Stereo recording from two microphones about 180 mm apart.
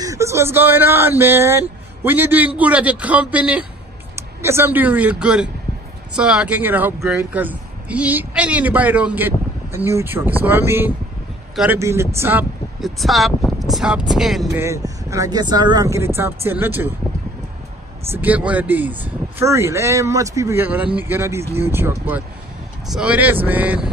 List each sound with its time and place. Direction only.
0.0 s speech: 15° right (ahead or behind)
12.8 s speech: centre (ahead or behind)
14.5 s speech: 15° right (ahead or behind)
18.1 s speech: 10° right (ahead or behind)